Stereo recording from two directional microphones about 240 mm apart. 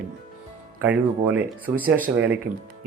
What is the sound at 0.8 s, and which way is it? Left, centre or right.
Speech, centre.